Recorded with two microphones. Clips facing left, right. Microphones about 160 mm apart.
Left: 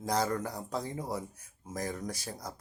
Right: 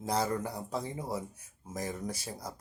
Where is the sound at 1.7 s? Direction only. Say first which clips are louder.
Even; 5° right (ahead or behind).